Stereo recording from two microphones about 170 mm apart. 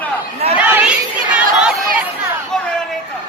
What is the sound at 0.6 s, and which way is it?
Crowd, 10° right (ahead or behind).